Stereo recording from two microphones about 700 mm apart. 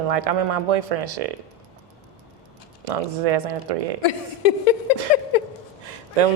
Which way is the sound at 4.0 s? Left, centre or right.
Left.